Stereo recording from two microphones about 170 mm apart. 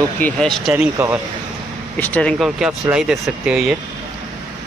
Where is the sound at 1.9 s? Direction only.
10° left (ahead or behind).